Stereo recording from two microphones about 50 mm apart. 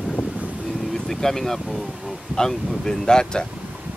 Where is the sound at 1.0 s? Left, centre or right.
Centre.